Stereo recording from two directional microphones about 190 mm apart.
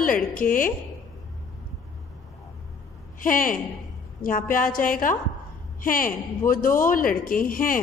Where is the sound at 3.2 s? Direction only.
45° left (ahead or behind).